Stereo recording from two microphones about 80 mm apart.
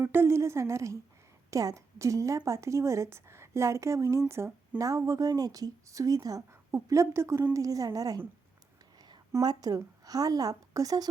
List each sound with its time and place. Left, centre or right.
0.0 s a woman's voice: right
4.8 s a woman's voice: right
6.5 s a woman's voice: right
9.4 s a woman's voice: right